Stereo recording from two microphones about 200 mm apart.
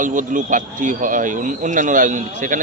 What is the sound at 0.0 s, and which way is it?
A man's voice, 40° right (ahead or behind).